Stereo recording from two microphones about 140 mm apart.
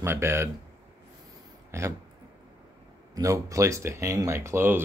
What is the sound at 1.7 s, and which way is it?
Speech, 20° right (ahead or behind).